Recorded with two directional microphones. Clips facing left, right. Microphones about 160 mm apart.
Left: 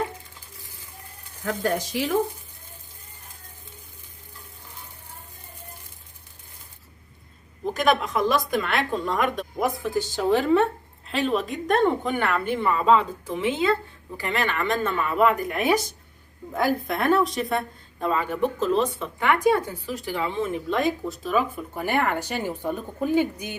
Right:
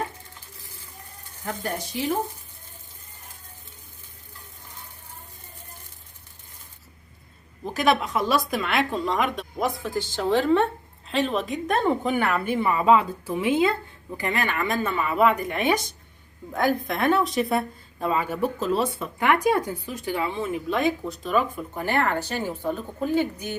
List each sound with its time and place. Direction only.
1.5 s speech: 90° left
7.7 s speech: 5° right (ahead or behind)
9.6 s a woman's voice: 10° left (ahead or behind)